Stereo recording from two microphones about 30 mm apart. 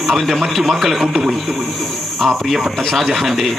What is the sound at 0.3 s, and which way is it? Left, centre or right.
Speech, centre.